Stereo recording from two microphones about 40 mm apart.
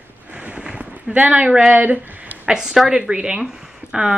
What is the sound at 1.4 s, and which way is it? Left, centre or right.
Speech, centre.